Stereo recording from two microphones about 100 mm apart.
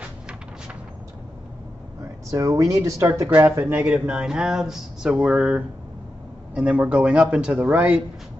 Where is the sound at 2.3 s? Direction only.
35° right (ahead or behind).